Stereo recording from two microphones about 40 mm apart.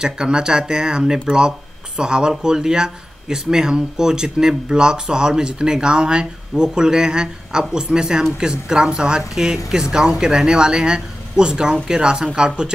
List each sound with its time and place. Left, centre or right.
0.0 s speech: centre